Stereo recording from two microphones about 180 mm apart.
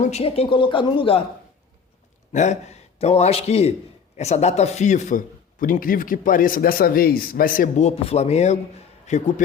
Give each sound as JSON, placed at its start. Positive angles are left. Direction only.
{"t": 0.0, "sound": "a man's voice", "side_deg": 35}
{"t": 2.3, "sound": "a man's voice", "side_deg": 40}